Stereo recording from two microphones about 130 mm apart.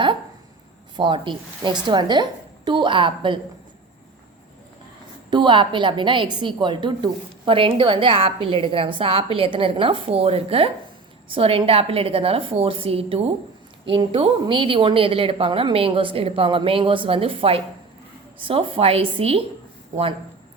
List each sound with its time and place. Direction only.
0.9 s a woman's voice: 40° right (ahead or behind)
5.3 s a woman's voice: 35° right (ahead or behind)